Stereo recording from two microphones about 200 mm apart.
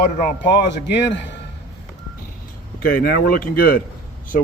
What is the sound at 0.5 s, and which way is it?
Speech, 60° left (ahead or behind).